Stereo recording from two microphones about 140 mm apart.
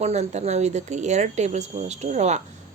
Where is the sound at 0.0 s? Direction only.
50° right (ahead or behind).